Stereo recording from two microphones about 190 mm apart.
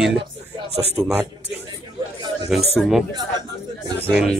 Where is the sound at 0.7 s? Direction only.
35° right (ahead or behind).